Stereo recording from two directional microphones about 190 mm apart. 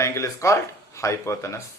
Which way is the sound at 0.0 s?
15° left (ahead or behind).